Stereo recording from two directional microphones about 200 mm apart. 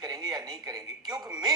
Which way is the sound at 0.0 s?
20° right (ahead or behind).